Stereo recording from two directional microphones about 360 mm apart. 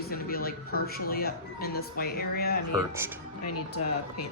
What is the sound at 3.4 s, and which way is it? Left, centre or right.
Speech, left.